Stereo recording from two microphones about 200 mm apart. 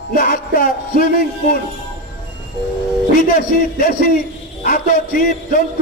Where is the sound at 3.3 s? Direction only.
45° left (ahead or behind).